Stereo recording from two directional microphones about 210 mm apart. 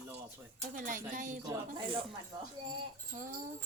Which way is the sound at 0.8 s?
40° right (ahead or behind).